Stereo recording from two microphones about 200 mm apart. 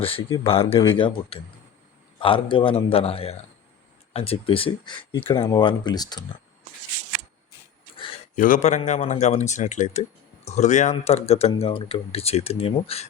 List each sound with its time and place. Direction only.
0.0 s speech: 25° left (ahead or behind)
8.4 s speech: 40° left (ahead or behind)